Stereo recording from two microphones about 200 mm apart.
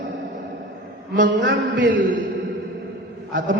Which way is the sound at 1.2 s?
65° right (ahead or behind).